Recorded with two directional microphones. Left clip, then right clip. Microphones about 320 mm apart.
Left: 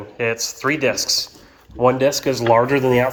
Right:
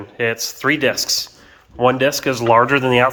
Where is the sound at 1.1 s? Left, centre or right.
Centre.